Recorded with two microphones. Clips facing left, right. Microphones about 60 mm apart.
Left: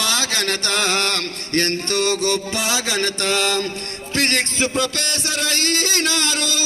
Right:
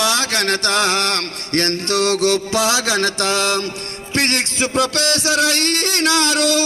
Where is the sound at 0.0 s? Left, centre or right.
Right.